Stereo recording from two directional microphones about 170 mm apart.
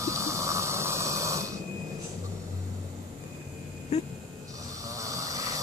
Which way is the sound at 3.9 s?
40° left (ahead or behind).